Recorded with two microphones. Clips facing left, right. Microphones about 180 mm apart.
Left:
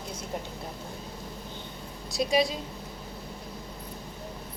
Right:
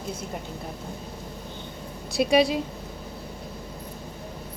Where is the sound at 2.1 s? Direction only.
65° right (ahead or behind).